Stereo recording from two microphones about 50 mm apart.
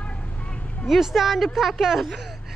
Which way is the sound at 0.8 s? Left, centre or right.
Centre.